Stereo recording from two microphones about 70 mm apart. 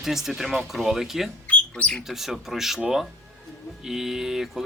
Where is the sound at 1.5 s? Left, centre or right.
Centre.